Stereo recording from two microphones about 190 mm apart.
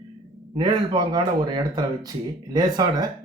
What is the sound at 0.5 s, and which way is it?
Speech, 20° right (ahead or behind).